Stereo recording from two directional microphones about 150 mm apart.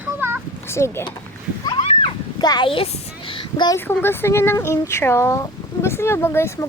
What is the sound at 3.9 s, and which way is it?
Speech, 15° left (ahead or behind).